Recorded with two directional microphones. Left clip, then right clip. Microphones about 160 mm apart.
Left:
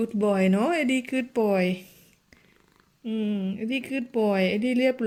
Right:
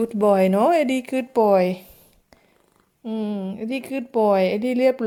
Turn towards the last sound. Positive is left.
turn(degrees=-15)  # may be behind; listen again after turning